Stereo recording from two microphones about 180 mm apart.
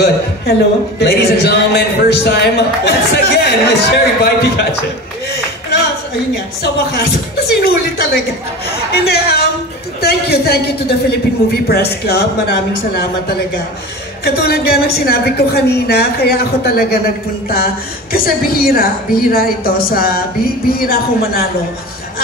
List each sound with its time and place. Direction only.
0.0 s a man's voice: 60° left (ahead or behind)
6.6 s a man's voice: 60° left (ahead or behind)